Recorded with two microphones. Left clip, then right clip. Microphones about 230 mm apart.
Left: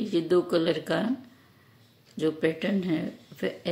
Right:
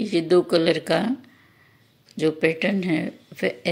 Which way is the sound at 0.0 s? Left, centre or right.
Centre.